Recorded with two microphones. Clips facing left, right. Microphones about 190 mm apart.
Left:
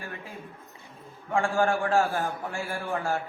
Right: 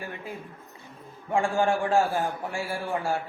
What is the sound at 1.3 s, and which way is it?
A man's voice, 15° right (ahead or behind).